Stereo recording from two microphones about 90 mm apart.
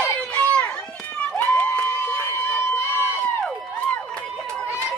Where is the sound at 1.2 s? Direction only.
15° left (ahead or behind).